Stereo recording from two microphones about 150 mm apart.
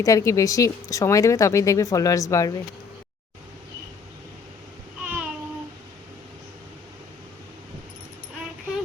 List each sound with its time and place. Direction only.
0.0 s speech: 20° left (ahead or behind)
5.0 s babbling: 10° right (ahead or behind)